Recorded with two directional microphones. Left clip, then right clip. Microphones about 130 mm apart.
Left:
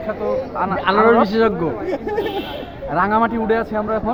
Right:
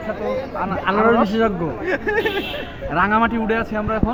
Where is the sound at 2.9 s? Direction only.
5° right (ahead or behind).